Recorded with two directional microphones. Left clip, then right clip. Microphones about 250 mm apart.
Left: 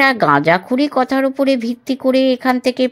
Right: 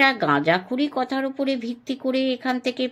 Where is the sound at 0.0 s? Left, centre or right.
Left.